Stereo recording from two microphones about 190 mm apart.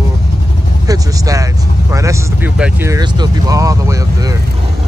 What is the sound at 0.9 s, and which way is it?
Vehicle, 20° right (ahead or behind).